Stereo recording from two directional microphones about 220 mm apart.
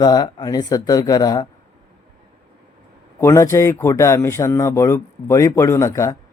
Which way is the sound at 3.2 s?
15° left (ahead or behind).